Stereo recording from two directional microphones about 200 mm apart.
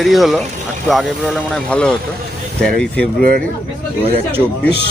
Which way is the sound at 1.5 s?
5° left (ahead or behind).